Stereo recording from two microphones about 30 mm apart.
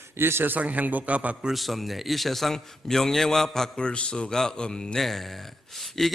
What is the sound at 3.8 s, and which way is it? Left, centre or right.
Speech, left.